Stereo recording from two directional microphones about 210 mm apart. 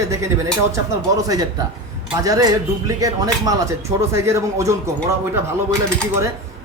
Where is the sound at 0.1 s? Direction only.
15° right (ahead or behind).